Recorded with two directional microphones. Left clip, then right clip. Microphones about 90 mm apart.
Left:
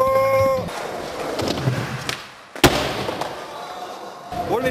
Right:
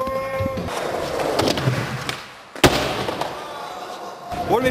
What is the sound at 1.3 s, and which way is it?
Skateboard, 20° right (ahead or behind).